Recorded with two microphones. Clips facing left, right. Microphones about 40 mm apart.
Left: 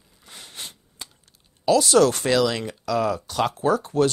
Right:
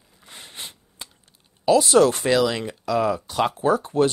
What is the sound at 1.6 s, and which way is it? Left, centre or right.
Speech, right.